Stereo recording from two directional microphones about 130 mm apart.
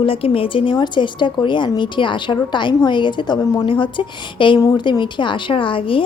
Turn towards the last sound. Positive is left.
turn(degrees=40)  # may be behind; listen again after turning